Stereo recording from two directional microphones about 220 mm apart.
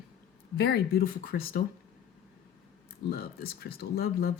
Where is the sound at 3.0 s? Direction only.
45° left (ahead or behind).